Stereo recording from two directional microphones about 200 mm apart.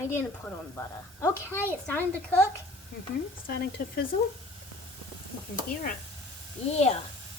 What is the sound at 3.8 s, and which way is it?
Speech, 45° left (ahead or behind).